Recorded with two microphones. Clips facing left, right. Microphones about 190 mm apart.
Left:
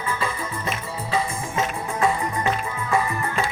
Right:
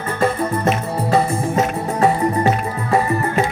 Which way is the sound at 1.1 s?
35° right (ahead or behind).